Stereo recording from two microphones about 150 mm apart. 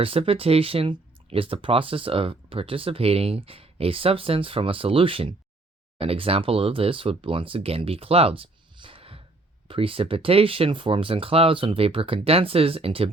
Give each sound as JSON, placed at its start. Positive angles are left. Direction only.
{"t": 0.0, "sound": "speech", "side_deg": -40}